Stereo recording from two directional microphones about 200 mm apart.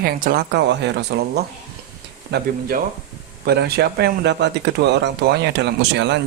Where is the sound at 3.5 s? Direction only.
50° right (ahead or behind).